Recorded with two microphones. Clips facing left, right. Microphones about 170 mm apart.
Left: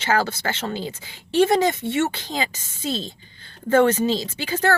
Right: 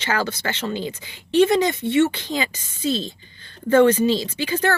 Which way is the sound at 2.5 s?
50° left (ahead or behind).